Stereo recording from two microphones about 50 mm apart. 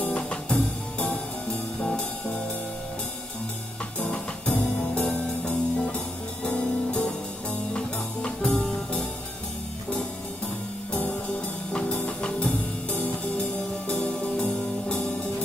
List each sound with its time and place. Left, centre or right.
0.0 s music: left
4.6 s music: left
10.9 s music: left
14.4 s music: left